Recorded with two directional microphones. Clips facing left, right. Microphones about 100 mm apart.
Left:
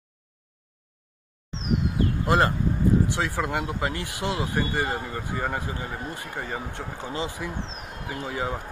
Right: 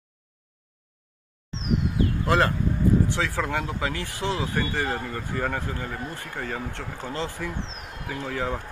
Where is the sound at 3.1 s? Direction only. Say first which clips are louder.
Even; 15° left (ahead or behind).